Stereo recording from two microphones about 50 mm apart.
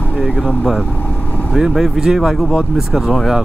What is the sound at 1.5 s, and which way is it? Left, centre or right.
Speech, centre.